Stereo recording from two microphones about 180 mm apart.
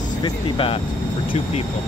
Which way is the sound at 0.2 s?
30° left (ahead or behind).